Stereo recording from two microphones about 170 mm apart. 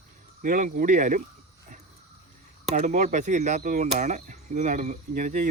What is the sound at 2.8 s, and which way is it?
Speech, 45° right (ahead or behind).